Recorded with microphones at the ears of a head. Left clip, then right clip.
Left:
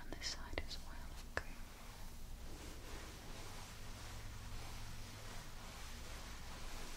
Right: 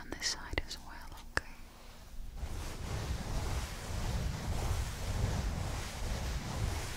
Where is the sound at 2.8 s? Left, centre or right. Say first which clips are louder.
Right 10 dB; right.